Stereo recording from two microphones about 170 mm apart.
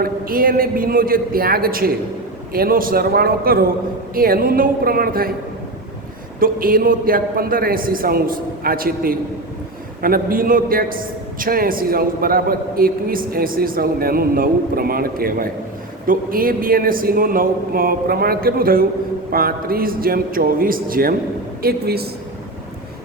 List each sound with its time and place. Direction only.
0.0 s a man's voice: 60° right (ahead or behind)
6.4 s a man's voice: 55° right (ahead or behind)